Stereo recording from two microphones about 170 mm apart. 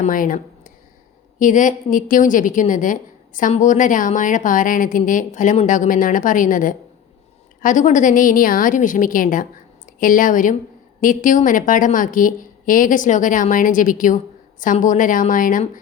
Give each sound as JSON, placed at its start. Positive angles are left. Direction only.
{"t": 0.0, "sound": "a woman's voice", "side_deg": 55}